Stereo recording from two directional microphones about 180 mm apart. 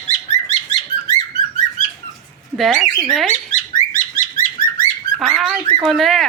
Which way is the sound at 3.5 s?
45° left (ahead or behind).